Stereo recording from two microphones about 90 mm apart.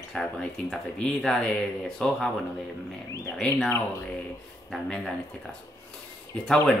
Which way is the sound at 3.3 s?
10° left (ahead or behind).